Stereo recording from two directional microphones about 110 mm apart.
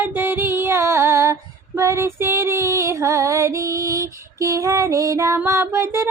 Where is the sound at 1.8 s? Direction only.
25° right (ahead or behind).